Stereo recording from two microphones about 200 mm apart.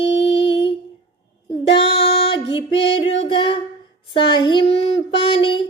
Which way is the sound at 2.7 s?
60° left (ahead or behind).